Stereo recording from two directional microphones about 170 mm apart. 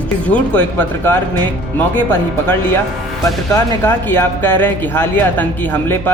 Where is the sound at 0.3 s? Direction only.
10° left (ahead or behind).